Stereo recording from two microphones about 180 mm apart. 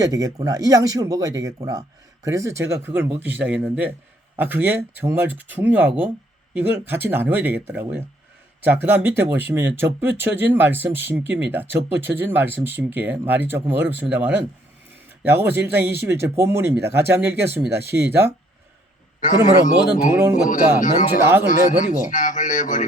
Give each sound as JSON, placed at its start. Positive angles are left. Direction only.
{"t": 0.0, "sound": "speech", "side_deg": -20}
{"t": 19.2, "sound": "a man's voice", "side_deg": 45}